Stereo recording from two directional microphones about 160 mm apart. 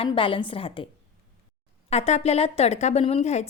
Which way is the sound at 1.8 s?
40° left (ahead or behind).